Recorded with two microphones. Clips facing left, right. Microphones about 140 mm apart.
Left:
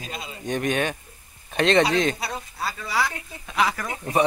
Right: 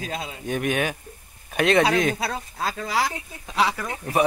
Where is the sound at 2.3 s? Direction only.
90° right.